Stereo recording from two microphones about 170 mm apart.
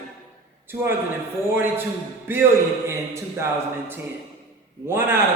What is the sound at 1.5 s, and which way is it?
A man's voice, 10° right (ahead or behind).